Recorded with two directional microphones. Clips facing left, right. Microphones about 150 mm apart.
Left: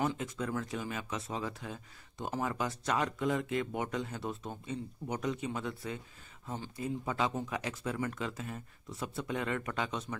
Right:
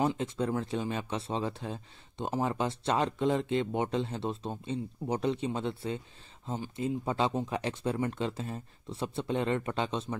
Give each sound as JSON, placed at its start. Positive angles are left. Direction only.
{"t": 0.0, "sound": "speech", "side_deg": -25}